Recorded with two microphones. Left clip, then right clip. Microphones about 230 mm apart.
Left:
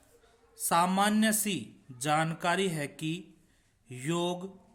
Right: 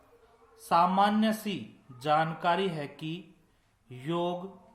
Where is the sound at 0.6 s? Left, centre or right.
Left.